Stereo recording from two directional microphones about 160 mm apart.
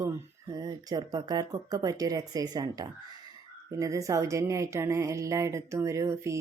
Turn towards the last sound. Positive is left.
turn(degrees=-20)  # may be behind; listen again after turning